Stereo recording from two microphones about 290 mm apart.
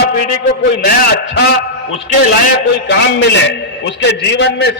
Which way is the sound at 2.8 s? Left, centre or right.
Left.